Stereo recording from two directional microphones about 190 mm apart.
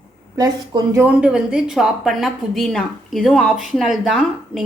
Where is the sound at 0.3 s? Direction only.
20° right (ahead or behind).